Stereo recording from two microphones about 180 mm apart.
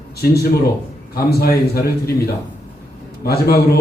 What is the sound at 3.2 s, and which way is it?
Speech, 60° left (ahead or behind).